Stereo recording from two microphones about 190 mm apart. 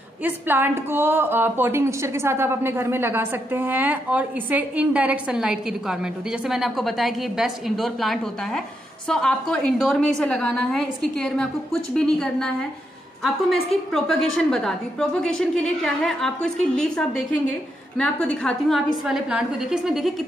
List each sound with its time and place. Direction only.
0.2 s a woman's voice: 10° right (ahead or behind)
13.9 s a woman's voice: centre (ahead or behind)